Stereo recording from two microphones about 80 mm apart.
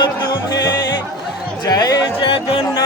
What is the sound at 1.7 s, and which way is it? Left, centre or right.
Speech, left.